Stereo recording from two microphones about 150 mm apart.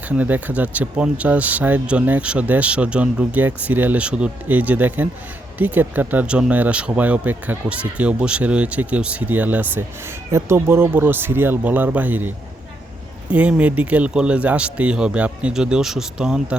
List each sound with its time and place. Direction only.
0.2 s speech: 10° right (ahead or behind)
13.3 s speech: 10° right (ahead or behind)